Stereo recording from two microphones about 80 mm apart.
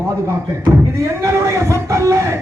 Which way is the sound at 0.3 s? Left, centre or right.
Right.